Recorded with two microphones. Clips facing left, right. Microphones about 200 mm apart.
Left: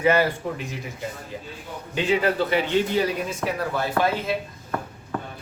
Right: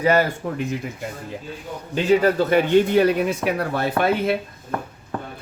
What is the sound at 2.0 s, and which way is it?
Speech, 45° right (ahead or behind).